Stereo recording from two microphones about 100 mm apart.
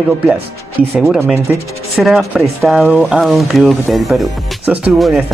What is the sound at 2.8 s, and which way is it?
Speech, 15° right (ahead or behind).